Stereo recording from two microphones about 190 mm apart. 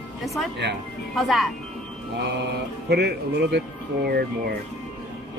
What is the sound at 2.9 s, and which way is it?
Speech, 60° right (ahead or behind).